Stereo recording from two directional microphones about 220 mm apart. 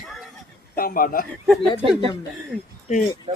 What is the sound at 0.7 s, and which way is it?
Speech, 40° left (ahead or behind).